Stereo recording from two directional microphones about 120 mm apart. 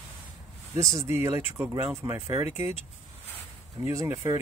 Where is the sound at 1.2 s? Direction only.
20° right (ahead or behind).